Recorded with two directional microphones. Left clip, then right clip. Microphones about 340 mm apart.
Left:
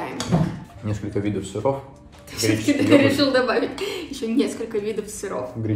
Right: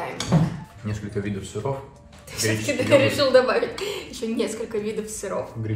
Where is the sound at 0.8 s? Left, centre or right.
Left.